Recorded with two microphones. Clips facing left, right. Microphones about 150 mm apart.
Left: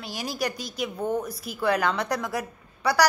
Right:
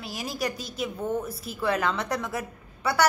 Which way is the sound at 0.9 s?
30° left (ahead or behind).